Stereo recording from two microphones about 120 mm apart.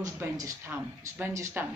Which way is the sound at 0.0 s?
25° right (ahead or behind).